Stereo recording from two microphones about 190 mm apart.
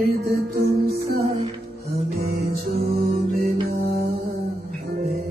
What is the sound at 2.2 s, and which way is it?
Music, 55° right (ahead or behind).